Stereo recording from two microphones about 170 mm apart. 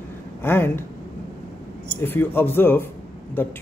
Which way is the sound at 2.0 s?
10° left (ahead or behind).